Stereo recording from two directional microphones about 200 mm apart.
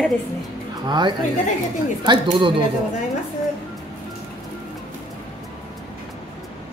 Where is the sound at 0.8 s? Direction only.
20° right (ahead or behind).